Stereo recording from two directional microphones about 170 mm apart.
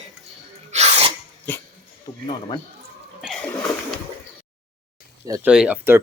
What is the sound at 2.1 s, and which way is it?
Speech, 35° left (ahead or behind).